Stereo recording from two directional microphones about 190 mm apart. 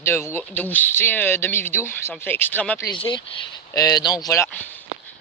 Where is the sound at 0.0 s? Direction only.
15° left (ahead or behind).